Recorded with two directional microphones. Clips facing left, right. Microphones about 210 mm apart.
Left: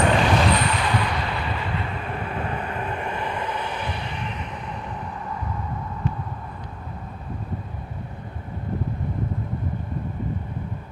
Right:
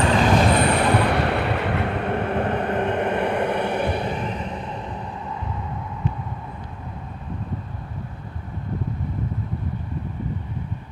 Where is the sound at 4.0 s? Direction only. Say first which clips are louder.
Right 6 dB; 40° right (ahead or behind).